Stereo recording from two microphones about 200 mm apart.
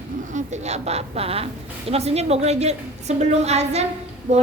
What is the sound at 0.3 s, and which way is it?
A woman's voice, 35° right (ahead or behind).